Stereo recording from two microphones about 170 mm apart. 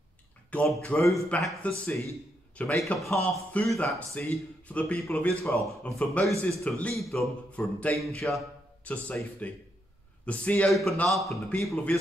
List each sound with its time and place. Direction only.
0.5 s speech: 5° left (ahead or behind)
5.5 s a man's voice: 35° right (ahead or behind)
5.9 s a man's voice: 10° left (ahead or behind)